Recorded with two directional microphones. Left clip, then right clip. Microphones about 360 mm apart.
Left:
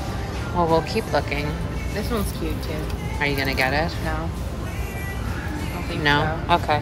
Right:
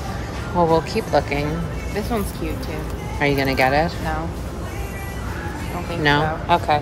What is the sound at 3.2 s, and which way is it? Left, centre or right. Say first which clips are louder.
Speech: right 4 dB; centre.